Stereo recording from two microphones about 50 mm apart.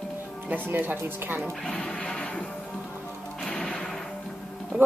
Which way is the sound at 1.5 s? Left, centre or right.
Centre.